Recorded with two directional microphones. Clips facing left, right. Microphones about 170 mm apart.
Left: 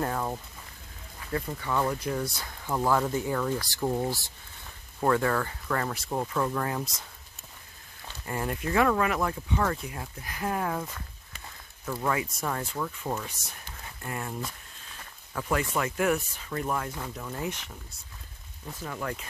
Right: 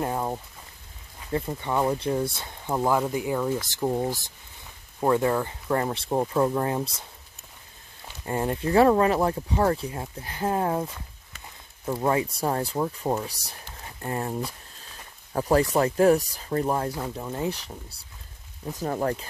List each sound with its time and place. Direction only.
0.0 s a sound: 20° right (ahead or behind)
1.3 s speech: 25° right (ahead or behind)
8.3 s speech: 25° right (ahead or behind)